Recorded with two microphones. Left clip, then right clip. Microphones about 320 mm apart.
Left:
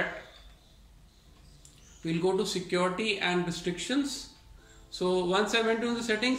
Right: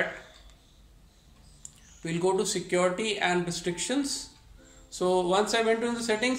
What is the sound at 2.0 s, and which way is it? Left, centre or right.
Speech, centre.